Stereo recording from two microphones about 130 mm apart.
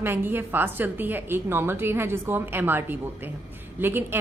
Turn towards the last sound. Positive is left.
turn(degrees=-15)  # may be behind; listen again after turning